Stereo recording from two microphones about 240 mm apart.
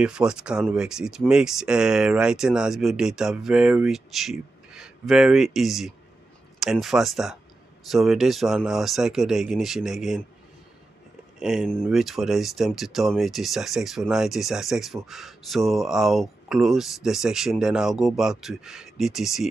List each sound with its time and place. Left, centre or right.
0.0 s speech: centre
11.3 s speech: centre